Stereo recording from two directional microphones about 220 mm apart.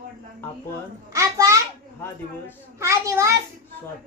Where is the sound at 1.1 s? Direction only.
15° right (ahead or behind).